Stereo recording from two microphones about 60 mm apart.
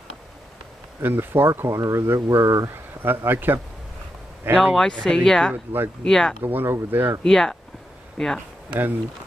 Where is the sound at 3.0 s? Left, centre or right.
Right.